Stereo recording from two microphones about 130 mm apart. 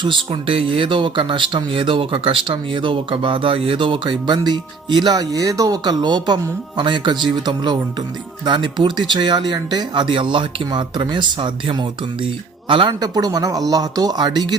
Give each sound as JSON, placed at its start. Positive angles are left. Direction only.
{"t": 0.3, "sound": "speech", "side_deg": -45}
{"t": 12.9, "sound": "speech", "side_deg": -30}